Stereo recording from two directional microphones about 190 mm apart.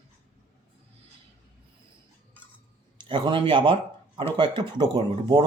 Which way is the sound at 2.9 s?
25° right (ahead or behind).